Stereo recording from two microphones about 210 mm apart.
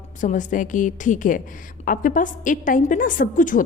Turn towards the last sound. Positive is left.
turn(degrees=40)  # may be behind; listen again after turning